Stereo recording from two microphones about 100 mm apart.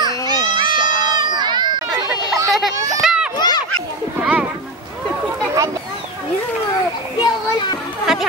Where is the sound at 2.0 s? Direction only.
35° right (ahead or behind).